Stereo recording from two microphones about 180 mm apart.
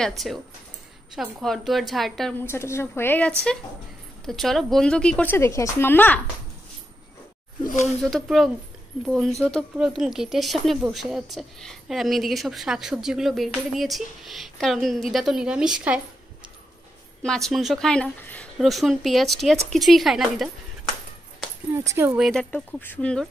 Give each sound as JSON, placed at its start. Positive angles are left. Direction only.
{"t": 0.0, "sound": "a woman's voice", "side_deg": 0}
{"t": 2.4, "sound": "speech", "side_deg": 15}
{"t": 7.6, "sound": "speech", "side_deg": 45}
{"t": 8.0, "sound": "a woman's voice", "side_deg": 0}
{"t": 17.2, "sound": "a woman's voice", "side_deg": 0}
{"t": 21.7, "sound": "speech", "side_deg": -15}
{"t": 22.2, "sound": "a woman's voice", "side_deg": 5}